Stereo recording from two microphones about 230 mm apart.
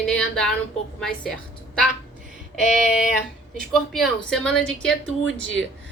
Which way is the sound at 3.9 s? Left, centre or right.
Centre.